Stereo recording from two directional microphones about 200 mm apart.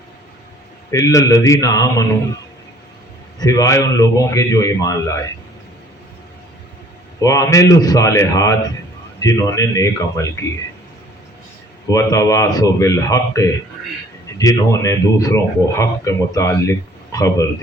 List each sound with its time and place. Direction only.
0.9 s speech: 15° left (ahead or behind)
3.3 s speech: 20° left (ahead or behind)
7.2 s speech: 15° left (ahead or behind)
11.9 s speech: 15° left (ahead or behind)